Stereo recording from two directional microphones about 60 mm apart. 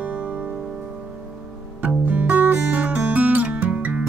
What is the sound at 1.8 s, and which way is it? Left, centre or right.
Music, right.